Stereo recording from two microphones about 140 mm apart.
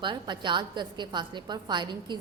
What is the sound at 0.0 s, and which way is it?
A woman's voice, 35° right (ahead or behind).